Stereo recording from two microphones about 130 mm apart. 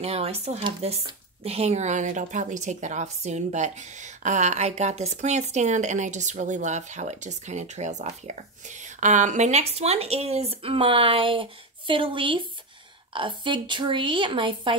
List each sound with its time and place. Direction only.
0.0 s a woman's voice: 50° right (ahead or behind)